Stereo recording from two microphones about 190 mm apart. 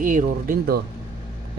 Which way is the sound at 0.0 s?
45° right (ahead or behind).